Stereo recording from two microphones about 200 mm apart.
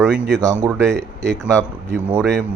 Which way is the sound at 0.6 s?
15° right (ahead or behind).